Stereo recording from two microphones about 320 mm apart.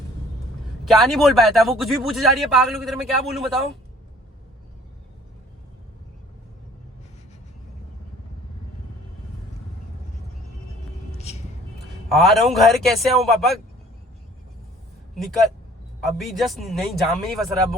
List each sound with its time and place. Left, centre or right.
0.9 s speech: centre
11.1 s vehicle: centre
12.1 s speech: centre
16.0 s speech: centre